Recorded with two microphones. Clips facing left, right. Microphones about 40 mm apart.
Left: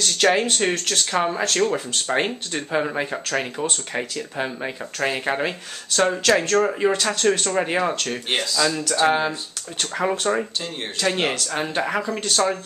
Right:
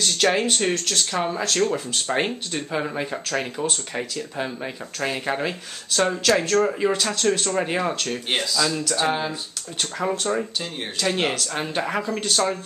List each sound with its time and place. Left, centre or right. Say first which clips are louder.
0.0 s speech: left 2 dB; centre
0.6 s speech: left 1 dB; left
1.4 s speech: left 1 dB; centre
6.5 s speech: left 1 dB; centre
10.3 s speech: left 2 dB; left
10.6 s speech: left 2 dB; centre